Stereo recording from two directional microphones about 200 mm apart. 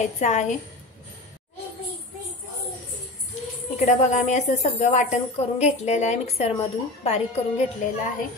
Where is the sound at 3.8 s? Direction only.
35° left (ahead or behind).